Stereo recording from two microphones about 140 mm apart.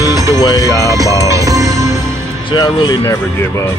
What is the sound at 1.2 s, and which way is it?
Music, 25° right (ahead or behind).